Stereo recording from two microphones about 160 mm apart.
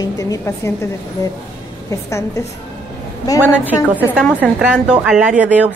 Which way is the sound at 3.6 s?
10° right (ahead or behind).